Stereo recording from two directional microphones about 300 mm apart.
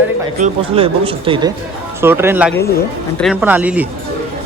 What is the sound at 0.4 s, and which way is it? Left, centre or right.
Speech, centre.